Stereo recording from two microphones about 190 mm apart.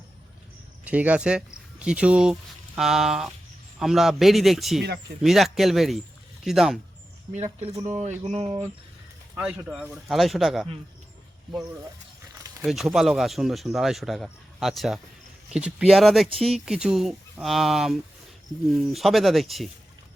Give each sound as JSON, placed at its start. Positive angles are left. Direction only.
{"t": 0.9, "sound": "speech", "side_deg": -5}
{"t": 7.3, "sound": "speech", "side_deg": -35}
{"t": 9.3, "sound": "speech", "side_deg": -5}
{"t": 12.6, "sound": "speech", "side_deg": 0}